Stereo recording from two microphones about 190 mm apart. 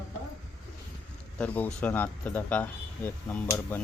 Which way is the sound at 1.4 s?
10° left (ahead or behind).